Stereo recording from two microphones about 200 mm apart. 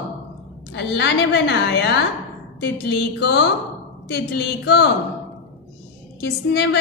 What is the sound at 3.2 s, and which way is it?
A woman's voice, 55° left (ahead or behind).